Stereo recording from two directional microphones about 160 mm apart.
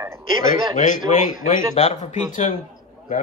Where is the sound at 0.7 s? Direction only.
55° left (ahead or behind).